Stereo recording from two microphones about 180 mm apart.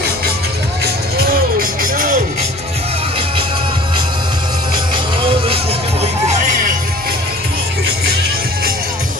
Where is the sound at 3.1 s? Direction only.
30° right (ahead or behind); by 7.1 s 50° right (ahead or behind).